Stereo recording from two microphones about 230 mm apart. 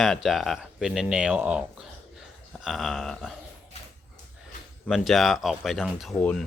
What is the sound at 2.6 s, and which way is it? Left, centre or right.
Speech, centre.